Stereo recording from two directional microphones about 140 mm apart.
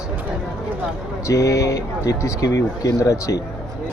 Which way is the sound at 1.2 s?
25° left (ahead or behind).